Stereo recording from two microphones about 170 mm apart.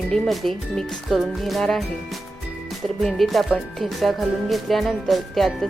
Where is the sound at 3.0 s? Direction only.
Centre (ahead or behind).